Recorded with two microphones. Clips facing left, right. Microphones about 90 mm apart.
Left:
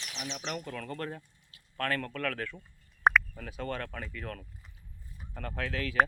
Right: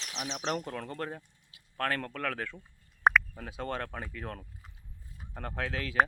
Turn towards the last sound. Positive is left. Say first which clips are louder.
# even
turn(degrees=-20)  # may be behind; listen again after turning